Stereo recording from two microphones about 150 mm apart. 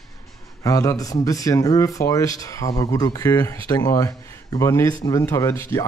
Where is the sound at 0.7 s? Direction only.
20° left (ahead or behind).